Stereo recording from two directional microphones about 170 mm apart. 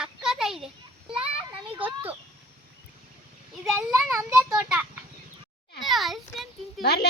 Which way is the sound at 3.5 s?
Centre (ahead or behind).